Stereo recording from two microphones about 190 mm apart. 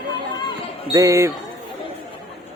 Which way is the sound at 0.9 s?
15° right (ahead or behind).